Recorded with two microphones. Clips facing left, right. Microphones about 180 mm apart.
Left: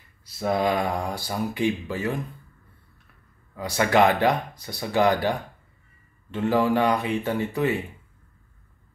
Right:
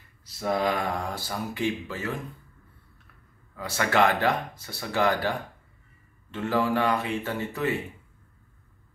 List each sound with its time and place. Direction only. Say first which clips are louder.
0.2 s speech: left 3 dB; 15° left (ahead or behind)
3.5 s speech: left 4 dB; 15° left (ahead or behind)